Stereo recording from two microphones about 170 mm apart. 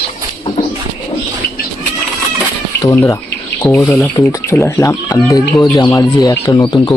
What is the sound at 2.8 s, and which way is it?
Speech, 20° left (ahead or behind).